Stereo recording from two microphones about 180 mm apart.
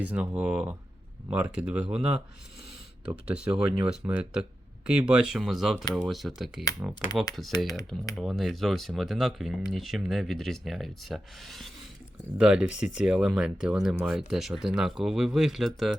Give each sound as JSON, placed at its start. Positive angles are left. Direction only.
{"t": 0.0, "sound": "speech", "side_deg": -10}
{"t": 3.2, "sound": "speech", "side_deg": -5}